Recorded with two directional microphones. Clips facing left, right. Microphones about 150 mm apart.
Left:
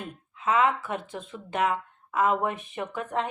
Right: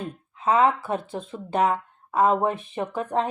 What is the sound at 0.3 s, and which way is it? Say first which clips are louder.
Speech: right 4 dB; 35° right (ahead or behind).